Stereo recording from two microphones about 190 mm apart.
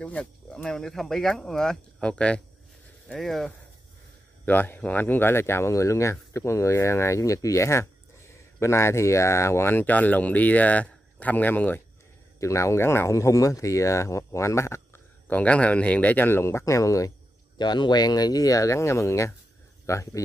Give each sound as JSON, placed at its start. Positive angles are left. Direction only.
{"t": 0.0, "sound": "speech", "side_deg": 5}